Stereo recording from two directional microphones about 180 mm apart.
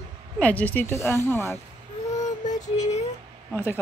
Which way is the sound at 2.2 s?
40° left (ahead or behind).